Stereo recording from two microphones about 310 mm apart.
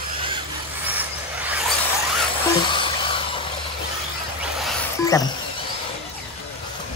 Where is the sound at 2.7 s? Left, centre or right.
Centre.